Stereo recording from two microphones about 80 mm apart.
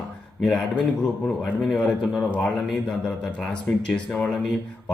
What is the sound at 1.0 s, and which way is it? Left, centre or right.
A man's voice, centre.